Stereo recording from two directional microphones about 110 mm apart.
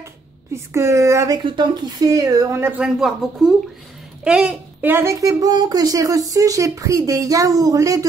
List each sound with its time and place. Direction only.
0.7 s speech: 25° right (ahead or behind)
1.4 s speech: 45° right (ahead or behind)
2.0 s speech: 30° right (ahead or behind)
2.8 s speech: centre (ahead or behind)
4.9 s speech: 25° right (ahead or behind)